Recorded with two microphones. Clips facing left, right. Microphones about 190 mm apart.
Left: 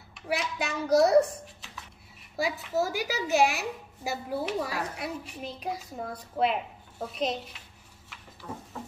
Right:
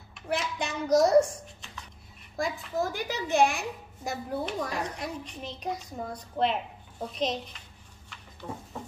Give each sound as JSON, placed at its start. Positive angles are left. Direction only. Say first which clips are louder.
{"t": 0.1, "sound": "a woman's voice", "louder": "even", "side_deg": 5}
{"t": 8.4, "sound": "speech", "louder": "right 1 dB", "side_deg": -25}